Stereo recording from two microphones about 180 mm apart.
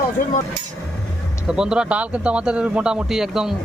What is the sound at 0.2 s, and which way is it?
Speech, 50° left (ahead or behind).